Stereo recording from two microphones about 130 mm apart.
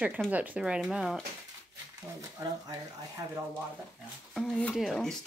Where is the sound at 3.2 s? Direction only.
25° right (ahead or behind).